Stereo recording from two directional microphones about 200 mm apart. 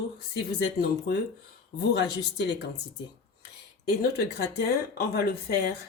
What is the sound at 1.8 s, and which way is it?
Speech, 60° left (ahead or behind).